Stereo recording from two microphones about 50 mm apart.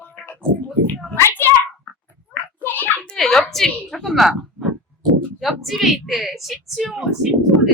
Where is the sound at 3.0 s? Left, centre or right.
Centre.